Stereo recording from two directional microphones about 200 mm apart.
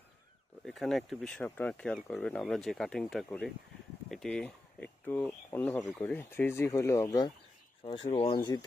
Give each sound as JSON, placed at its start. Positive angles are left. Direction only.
{"t": 0.6, "sound": "speech", "side_deg": 0}
{"t": 7.9, "sound": "speech", "side_deg": 30}